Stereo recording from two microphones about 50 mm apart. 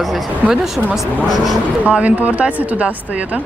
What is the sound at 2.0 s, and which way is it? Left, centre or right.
Speech, right.